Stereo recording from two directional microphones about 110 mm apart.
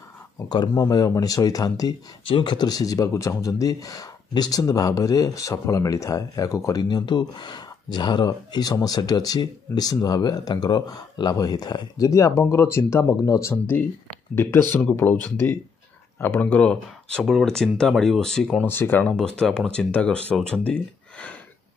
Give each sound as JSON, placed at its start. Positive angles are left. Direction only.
{"t": 0.5, "sound": "speech", "side_deg": 35}
{"t": 2.2, "sound": "speech", "side_deg": 45}
{"t": 18.7, "sound": "speech", "side_deg": 20}
{"t": 19.1, "sound": "speech", "side_deg": 5}